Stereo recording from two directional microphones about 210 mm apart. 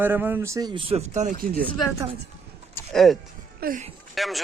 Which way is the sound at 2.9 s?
Centre (ahead or behind).